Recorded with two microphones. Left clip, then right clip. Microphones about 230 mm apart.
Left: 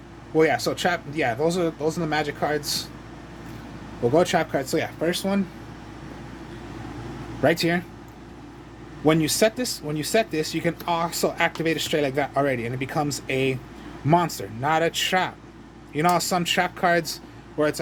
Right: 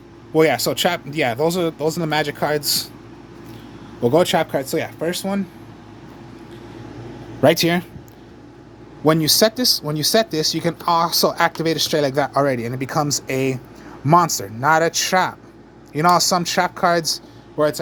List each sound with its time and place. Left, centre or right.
0.3 s speech: right
4.0 s speech: right
7.4 s speech: right
9.0 s speech: right